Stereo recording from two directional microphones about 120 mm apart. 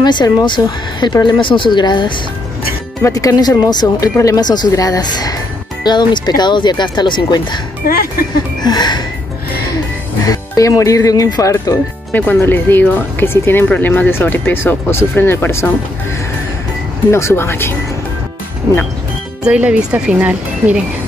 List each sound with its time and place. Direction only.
0.0 s speech: 35° left (ahead or behind)
3.0 s speech: 30° left (ahead or behind)
8.6 s speech: 35° left (ahead or behind)
10.2 s speech: 30° left (ahead or behind)
12.1 s speech: 15° left (ahead or behind)
17.1 s speech: 20° left (ahead or behind)
19.4 s speech: 10° right (ahead or behind)